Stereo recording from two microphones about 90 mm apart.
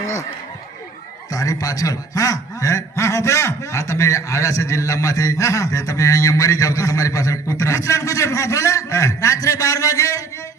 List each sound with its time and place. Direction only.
1.3 s a man's voice: 40° left (ahead or behind)